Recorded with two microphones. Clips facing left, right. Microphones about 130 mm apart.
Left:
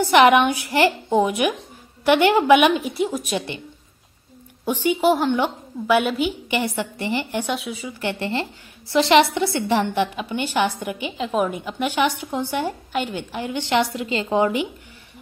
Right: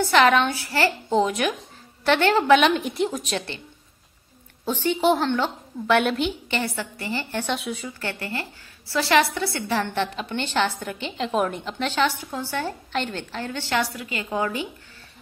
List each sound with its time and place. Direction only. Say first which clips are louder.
0.0 s a woman's voice: left 4 dB; 15° left (ahead or behind)
4.6 s a woman's voice: left 2 dB; 10° left (ahead or behind)
7.5 s a woman's voice: left 1 dB; centre (ahead or behind)
8.0 s a woman's voice: left 6 dB; 20° left (ahead or behind)